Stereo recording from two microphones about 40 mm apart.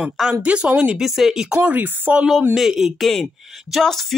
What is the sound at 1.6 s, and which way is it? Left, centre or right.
Speech, right.